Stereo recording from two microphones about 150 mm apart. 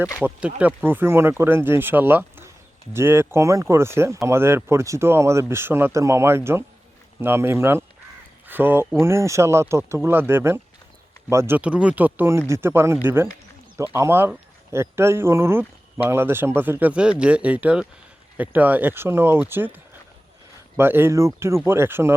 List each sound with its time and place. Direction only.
0.3 s speech: 10° right (ahead or behind)